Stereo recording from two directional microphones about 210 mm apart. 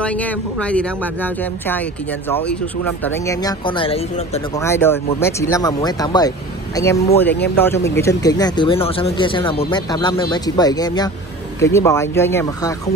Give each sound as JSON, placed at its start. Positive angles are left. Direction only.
{"t": 0.0, "sound": "speech", "side_deg": 5}
{"t": 2.8, "sound": "speech", "side_deg": 10}
{"t": 4.6, "sound": "speech", "side_deg": 10}